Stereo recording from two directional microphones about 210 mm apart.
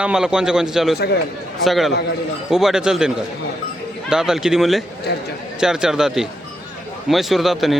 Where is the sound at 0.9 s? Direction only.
50° left (ahead or behind).